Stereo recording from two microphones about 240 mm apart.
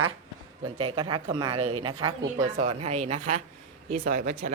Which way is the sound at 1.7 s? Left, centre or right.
Right.